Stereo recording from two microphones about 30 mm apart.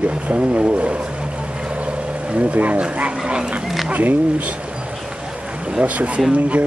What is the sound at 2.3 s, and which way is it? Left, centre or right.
Speech, right.